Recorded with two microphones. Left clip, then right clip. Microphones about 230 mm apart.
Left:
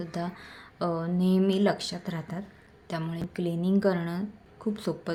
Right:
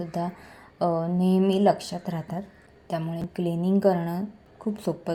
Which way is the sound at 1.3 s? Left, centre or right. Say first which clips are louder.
Right 4 dB; centre.